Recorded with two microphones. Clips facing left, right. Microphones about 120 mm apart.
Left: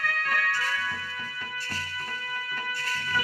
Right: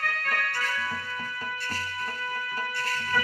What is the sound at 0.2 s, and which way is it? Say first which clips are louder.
Music: left 2 dB; 50° right (ahead or behind).